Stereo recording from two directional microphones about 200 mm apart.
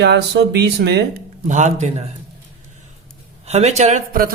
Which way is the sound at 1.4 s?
35° right (ahead or behind).